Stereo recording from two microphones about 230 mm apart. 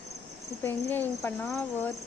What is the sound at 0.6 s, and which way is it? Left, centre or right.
Speech, centre.